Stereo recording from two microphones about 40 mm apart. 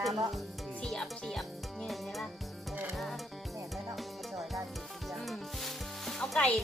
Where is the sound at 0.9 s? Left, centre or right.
Centre.